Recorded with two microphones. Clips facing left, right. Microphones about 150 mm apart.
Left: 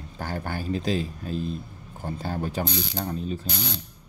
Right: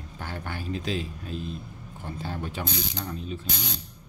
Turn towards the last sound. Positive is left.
turn(degrees=40)  # may be behind; listen again after turning